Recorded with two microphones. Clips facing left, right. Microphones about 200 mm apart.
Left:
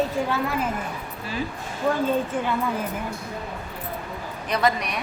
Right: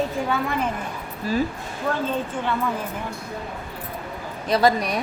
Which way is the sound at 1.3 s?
40° right (ahead or behind).